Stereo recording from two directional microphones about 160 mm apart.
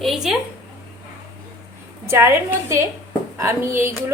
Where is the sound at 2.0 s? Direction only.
15° right (ahead or behind).